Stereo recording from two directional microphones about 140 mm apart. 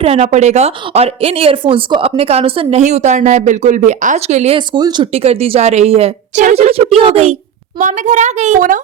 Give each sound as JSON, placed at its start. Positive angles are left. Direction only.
{"t": 0.0, "sound": "a woman's voice", "side_deg": -50}
{"t": 4.5, "sound": "speech", "side_deg": -35}
{"t": 5.1, "sound": "a woman's voice", "side_deg": -45}
{"t": 7.8, "sound": "a child's voice", "side_deg": -65}